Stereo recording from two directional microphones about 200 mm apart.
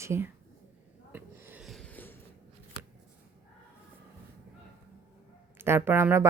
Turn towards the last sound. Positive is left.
turn(degrees=-10)  # may be behind; listen again after turning